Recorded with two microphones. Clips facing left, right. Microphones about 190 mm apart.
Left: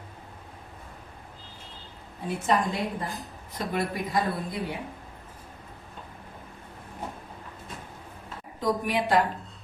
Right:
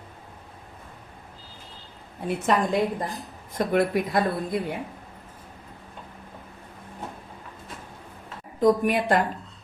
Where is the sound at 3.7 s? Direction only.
60° right (ahead or behind).